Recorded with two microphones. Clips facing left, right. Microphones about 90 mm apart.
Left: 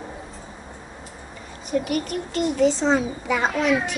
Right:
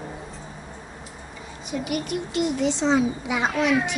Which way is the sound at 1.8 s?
45° left (ahead or behind).